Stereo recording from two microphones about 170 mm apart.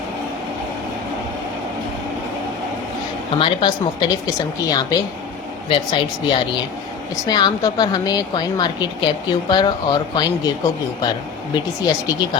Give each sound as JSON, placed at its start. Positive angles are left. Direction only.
{"t": 3.3, "sound": "a woman's voice", "side_deg": 30}
{"t": 11.9, "sound": "a woman's voice", "side_deg": 25}